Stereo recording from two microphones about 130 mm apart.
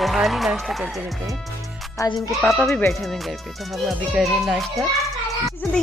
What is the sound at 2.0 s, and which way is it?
Speech, 25° left (ahead or behind).